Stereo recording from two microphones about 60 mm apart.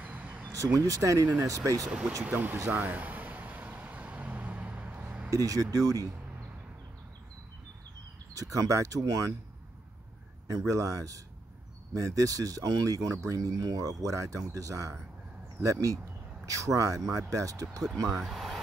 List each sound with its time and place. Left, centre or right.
0.0 s a sound: right
0.7 s speech: right
1.9 s speech: centre
2.2 s speech: right
2.7 s vehicle: right
5.3 s speech: right
8.4 s speech: right
10.5 s speech: right
18.0 s speech: centre